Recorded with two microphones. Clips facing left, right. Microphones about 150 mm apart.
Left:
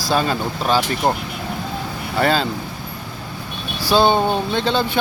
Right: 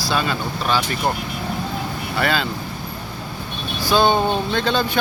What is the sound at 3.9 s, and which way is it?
Speech, 30° left (ahead or behind).